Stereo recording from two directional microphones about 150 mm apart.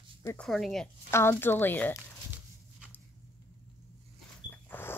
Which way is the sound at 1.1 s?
15° left (ahead or behind).